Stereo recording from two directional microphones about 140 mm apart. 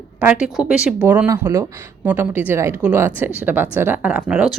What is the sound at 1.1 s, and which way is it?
Speech, 15° right (ahead or behind).